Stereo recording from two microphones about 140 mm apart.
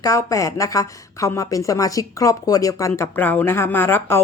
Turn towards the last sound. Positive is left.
turn(degrees=15)  # may be behind; listen again after turning